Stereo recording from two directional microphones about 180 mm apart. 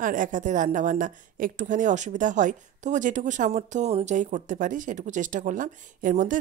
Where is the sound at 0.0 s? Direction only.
45° right (ahead or behind).